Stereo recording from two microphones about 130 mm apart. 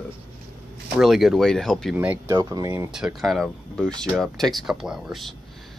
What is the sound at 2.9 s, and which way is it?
Speech, centre (ahead or behind).